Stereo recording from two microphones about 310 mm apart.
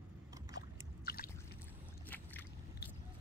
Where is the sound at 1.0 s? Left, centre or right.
Left.